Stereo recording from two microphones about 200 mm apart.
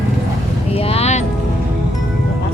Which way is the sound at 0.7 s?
30° left (ahead or behind).